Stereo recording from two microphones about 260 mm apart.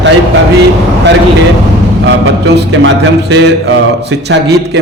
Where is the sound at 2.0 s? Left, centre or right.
Right.